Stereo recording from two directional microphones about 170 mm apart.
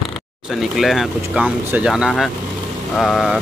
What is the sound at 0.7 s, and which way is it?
Speech, centre (ahead or behind).